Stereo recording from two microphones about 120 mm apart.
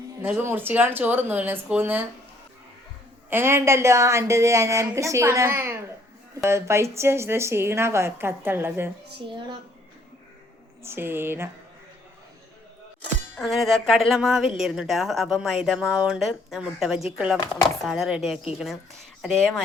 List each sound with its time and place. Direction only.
0.2 s speech: 15° right (ahead or behind)
3.2 s speech: 20° right (ahead or behind)
10.8 s speech: 20° right (ahead or behind)
13.4 s speech: centre (ahead or behind)